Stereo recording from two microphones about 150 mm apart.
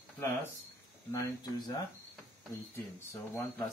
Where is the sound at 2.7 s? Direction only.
15° left (ahead or behind).